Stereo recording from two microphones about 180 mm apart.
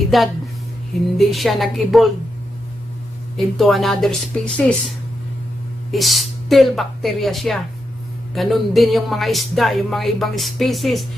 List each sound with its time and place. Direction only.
0.1 s speech: centre (ahead or behind)
3.3 s speech: centre (ahead or behind)